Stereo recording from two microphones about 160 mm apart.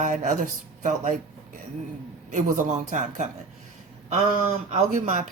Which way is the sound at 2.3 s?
50° right (ahead or behind).